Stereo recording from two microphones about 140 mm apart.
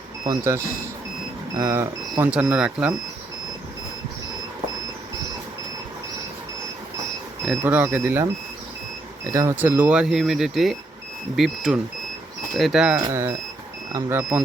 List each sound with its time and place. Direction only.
0.3 s speech: 20° right (ahead or behind)
7.6 s speech: 15° right (ahead or behind)
13.1 s speech: 20° right (ahead or behind)